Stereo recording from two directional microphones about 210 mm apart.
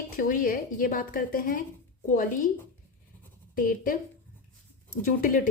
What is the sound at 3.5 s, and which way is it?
Speech, 40° left (ahead or behind).